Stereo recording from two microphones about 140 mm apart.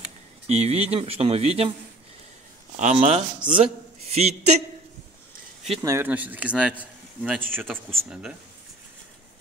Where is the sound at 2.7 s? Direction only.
60° right (ahead or behind).